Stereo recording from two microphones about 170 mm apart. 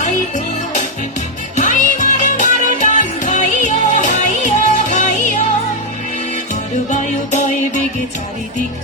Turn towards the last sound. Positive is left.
turn(degrees=45)  # may be behind; listen again after turning